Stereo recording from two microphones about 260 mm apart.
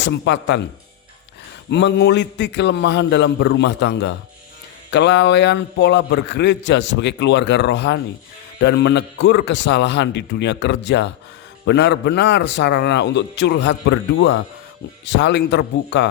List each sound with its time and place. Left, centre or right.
0.0 s a man's voice: left
1.7 s a man's voice: left